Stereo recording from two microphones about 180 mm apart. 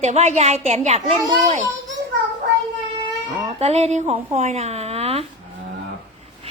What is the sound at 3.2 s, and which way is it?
A woman's voice, 35° right (ahead or behind).